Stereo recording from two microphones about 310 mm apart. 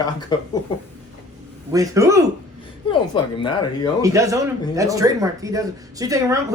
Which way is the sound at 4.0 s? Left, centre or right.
Centre.